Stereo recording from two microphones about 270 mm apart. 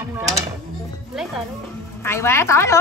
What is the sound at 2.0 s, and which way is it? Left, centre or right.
Speech, centre.